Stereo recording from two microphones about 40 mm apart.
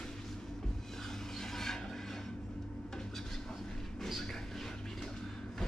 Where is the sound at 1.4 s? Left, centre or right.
Centre.